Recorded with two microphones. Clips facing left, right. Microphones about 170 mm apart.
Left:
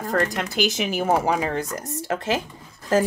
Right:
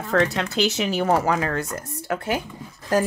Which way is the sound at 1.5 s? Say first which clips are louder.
Even; 35° left (ahead or behind).